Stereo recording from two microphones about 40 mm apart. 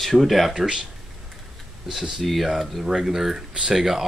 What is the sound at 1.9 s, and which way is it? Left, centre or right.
Speech, centre.